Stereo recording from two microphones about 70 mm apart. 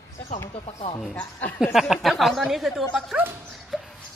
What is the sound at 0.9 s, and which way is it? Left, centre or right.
Speech, left.